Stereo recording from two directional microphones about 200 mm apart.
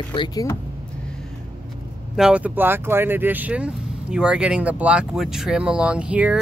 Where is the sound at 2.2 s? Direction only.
5° right (ahead or behind).